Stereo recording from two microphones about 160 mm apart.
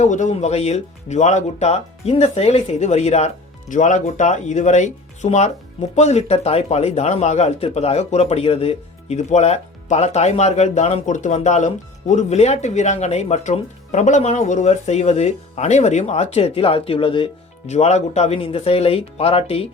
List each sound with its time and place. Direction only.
0.0 s speech: 50° left (ahead or behind)